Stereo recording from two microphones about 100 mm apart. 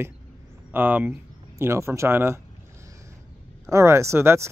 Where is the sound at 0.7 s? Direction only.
20° right (ahead or behind).